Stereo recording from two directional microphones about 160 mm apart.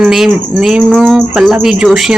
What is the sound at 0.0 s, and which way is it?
Speech, centre (ahead or behind).